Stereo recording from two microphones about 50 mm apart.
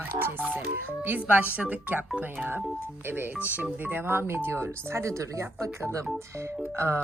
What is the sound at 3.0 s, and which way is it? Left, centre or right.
Speech, right.